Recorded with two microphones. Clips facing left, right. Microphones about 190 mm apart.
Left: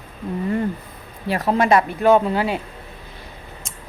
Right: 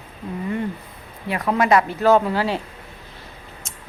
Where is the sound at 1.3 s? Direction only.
30° left (ahead or behind).